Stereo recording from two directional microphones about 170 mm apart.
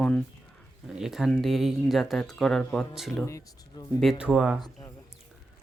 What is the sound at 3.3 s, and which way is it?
Speech, 20° left (ahead or behind).